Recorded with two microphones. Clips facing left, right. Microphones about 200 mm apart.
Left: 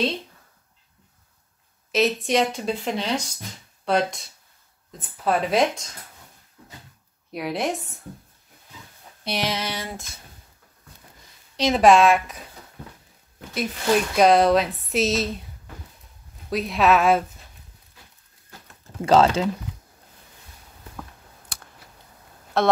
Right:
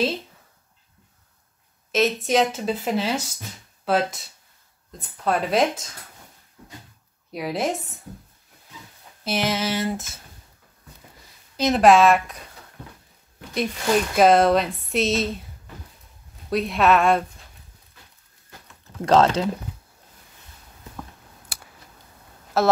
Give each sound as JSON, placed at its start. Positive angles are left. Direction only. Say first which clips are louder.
{"t": 1.9, "sound": "speech", "louder": "even", "side_deg": 0}
{"t": 7.3, "sound": "speech", "louder": "right 1 dB", "side_deg": 0}
{"t": 9.2, "sound": "speech", "louder": "right 3 dB", "side_deg": 0}
{"t": 11.5, "sound": "speech", "louder": "even", "side_deg": 0}
{"t": 13.6, "sound": "speech", "louder": "even", "side_deg": 0}
{"t": 16.4, "sound": "speech", "louder": "right 1 dB", "side_deg": 0}
{"t": 18.9, "sound": "speech", "louder": "even", "side_deg": 5}
{"t": 21.5, "sound": "computer keyboard", "louder": "right 1 dB", "side_deg": -5}
{"t": 22.5, "sound": "speech", "louder": "right 1 dB", "side_deg": -5}